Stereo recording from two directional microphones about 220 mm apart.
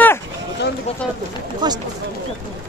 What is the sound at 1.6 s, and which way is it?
Speech, 20° right (ahead or behind).